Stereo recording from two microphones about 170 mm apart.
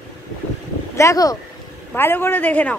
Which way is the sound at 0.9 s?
20° left (ahead or behind).